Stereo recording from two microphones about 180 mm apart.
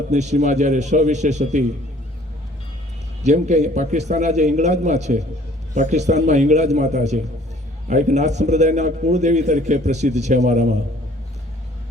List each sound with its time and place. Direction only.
0.1 s a man's voice: 40° right (ahead or behind)
3.2 s a man's voice: 40° right (ahead or behind)